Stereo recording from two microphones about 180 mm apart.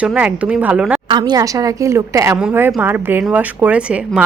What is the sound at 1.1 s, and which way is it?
A woman's voice, 25° right (ahead or behind).